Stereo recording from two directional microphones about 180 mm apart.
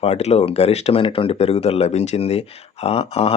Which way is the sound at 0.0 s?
35° left (ahead or behind).